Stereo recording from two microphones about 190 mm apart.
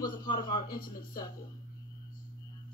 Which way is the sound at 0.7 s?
50° left (ahead or behind).